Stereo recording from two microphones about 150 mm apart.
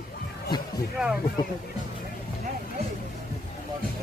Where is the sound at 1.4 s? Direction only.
30° left (ahead or behind).